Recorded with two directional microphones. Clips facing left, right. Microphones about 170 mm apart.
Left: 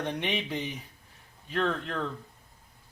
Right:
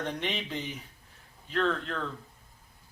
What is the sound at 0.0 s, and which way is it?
Speech, 10° left (ahead or behind).